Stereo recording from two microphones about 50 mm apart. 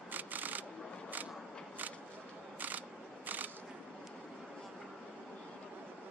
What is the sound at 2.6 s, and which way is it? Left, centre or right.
Camera, right.